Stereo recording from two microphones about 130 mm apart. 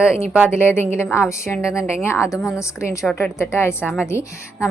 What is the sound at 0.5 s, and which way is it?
A woman's voice, 20° left (ahead or behind).